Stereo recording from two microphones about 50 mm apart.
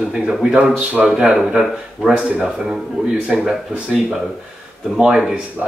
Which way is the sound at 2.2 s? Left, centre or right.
Centre.